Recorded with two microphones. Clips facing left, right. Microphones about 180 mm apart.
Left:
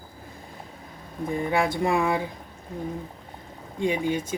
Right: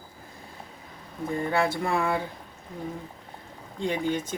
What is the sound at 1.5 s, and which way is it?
Speech, 15° left (ahead or behind).